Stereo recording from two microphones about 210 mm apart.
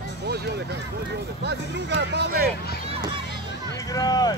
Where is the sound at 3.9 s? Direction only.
20° left (ahead or behind).